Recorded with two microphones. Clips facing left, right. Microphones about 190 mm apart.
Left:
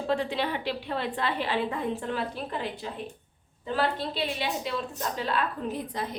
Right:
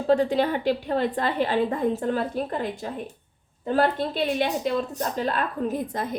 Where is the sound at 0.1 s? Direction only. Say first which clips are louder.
Right 8 dB; 45° right (ahead or behind).